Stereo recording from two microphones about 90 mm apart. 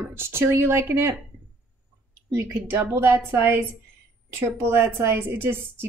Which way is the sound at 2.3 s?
30° right (ahead or behind).